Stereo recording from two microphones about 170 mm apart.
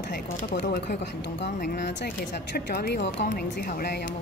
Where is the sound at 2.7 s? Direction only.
80° left; by 4.0 s 65° left (ahead or behind).